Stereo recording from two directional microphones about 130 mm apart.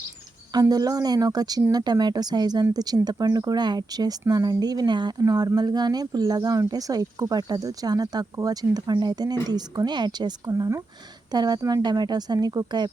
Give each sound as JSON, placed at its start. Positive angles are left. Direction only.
{"t": 0.5, "sound": "speech", "side_deg": -30}